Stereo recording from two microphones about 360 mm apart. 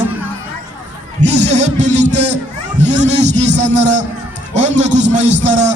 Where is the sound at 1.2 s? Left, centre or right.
Centre.